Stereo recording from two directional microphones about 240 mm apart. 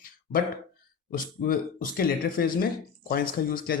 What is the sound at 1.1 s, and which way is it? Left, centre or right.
Speech, left.